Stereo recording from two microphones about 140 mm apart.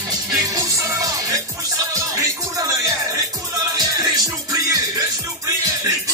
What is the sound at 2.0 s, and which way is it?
Music, 20° right (ahead or behind).